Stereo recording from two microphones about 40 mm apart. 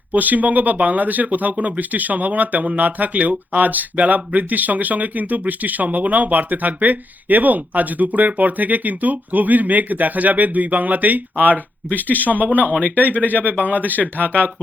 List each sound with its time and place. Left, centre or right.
0.1 s speech: right